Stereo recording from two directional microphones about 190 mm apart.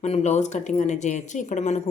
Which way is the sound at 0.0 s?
35° left (ahead or behind).